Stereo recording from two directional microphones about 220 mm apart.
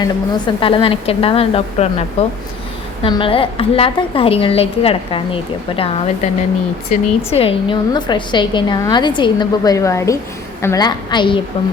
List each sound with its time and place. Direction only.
0.0 s a woman's voice: 20° left (ahead or behind)